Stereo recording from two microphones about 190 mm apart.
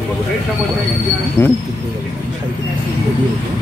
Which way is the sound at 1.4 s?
15° left (ahead or behind).